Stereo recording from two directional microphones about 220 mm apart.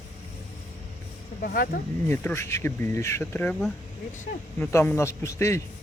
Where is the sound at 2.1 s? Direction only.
10° left (ahead or behind).